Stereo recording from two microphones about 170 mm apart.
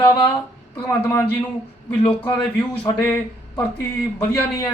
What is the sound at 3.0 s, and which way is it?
A man's voice, 10° left (ahead or behind).